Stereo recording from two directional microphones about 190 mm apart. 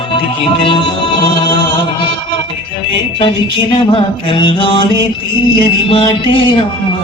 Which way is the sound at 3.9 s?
25° left (ahead or behind).